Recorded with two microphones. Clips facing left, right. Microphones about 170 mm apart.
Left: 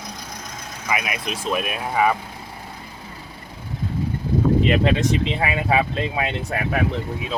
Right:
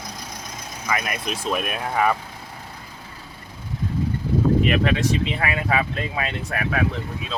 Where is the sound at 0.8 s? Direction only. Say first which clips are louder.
Even; 10° left (ahead or behind).